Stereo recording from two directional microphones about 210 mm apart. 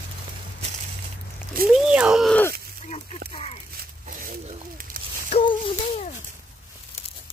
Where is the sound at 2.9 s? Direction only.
25° left (ahead or behind).